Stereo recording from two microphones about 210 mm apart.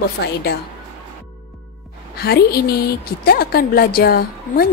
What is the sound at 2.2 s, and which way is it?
A woman's voice, 50° left (ahead or behind).